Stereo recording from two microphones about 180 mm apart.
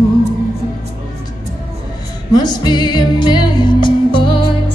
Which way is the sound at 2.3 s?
25° left (ahead or behind).